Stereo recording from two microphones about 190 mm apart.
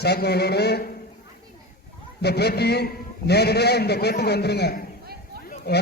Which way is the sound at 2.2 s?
60° left (ahead or behind).